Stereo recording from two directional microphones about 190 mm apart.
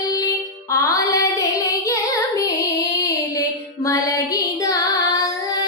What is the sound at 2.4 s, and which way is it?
Female singing, 20° left (ahead or behind).